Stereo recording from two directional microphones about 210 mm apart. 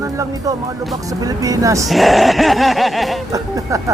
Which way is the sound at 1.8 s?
Centre (ahead or behind).